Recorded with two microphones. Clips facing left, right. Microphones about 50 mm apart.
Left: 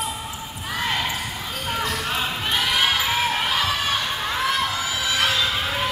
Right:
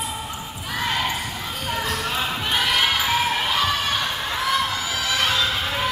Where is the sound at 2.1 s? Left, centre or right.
Centre.